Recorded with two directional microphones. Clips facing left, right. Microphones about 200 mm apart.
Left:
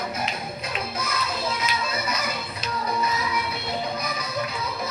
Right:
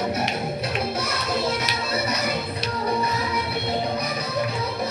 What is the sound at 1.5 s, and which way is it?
Music, 40° right (ahead or behind).